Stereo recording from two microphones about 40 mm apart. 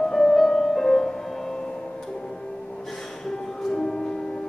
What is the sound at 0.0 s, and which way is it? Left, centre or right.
Music, centre.